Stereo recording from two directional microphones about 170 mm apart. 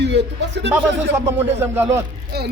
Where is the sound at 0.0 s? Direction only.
90° right.